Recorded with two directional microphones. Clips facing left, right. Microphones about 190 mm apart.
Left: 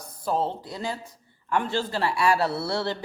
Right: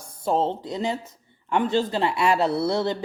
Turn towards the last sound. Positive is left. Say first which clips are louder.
# right 5 dB
turn(degrees=-20)  # may be behind; listen again after turning